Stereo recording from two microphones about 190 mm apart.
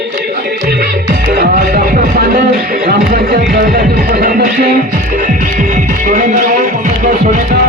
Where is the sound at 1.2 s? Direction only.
60° right (ahead or behind).